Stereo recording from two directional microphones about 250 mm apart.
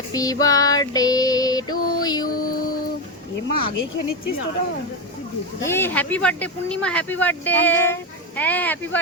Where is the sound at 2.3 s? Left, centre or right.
Left.